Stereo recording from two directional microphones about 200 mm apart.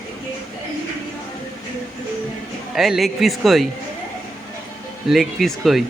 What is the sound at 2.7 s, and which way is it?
Speech, centre (ahead or behind).